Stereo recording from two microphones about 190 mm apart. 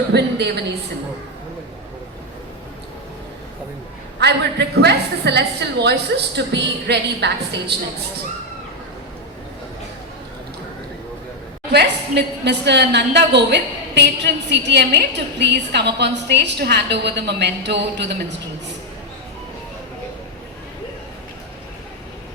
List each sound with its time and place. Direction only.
0.1 s a woman's voice: 60° right (ahead or behind)
4.2 s a woman's voice: 60° right (ahead or behind)
11.7 s a woman's voice: 60° right (ahead or behind)